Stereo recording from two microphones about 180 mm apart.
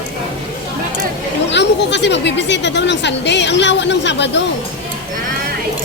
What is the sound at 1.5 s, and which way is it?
Speech, 75° left (ahead or behind).